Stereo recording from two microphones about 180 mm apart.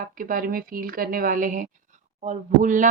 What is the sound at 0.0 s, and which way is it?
Speech, 50° right (ahead or behind).